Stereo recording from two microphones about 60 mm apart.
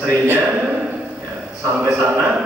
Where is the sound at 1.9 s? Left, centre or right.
Right.